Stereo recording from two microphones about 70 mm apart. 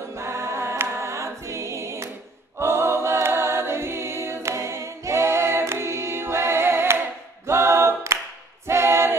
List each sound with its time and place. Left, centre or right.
0.1 s choir: right
2.6 s a capella: right
8.6 s choir: right